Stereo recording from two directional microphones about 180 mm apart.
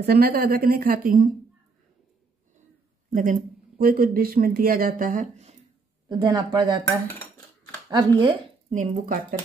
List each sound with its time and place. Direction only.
0.0 s a woman's voice: 60° right (ahead or behind)
3.1 s speech: 45° right (ahead or behind)
6.0 s speech: 20° right (ahead or behind)
7.1 s cutlery: 10° left (ahead or behind)
8.2 s a woman's voice: 30° right (ahead or behind)
8.7 s speech: 45° right (ahead or behind)